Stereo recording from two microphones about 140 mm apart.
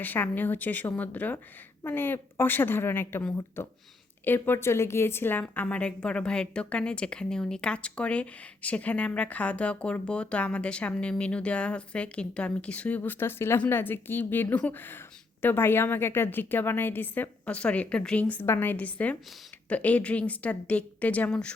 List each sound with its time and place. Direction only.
0.0 s a woman's voice: 15° left (ahead or behind)